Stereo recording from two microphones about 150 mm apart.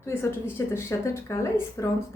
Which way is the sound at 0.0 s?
15° left (ahead or behind).